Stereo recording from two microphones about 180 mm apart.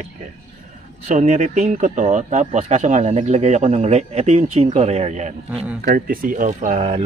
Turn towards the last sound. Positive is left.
turn(degrees=-40)  # may be behind; listen again after turning